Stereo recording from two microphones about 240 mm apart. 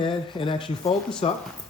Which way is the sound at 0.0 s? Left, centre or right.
Left.